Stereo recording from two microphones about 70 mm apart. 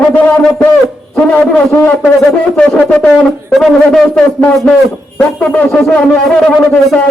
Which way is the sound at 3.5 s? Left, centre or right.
Centre.